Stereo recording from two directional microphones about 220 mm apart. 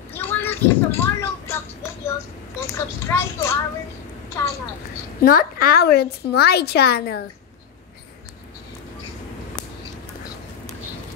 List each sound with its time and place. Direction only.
0.1 s a sound: 10° left (ahead or behind)
2.6 s speech: 10° left (ahead or behind)
5.2 s a woman's voice: 40° left (ahead or behind)